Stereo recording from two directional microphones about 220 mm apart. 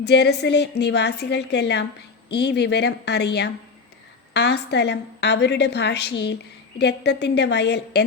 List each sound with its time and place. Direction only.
0.0 s a woman's voice: 50° left (ahead or behind)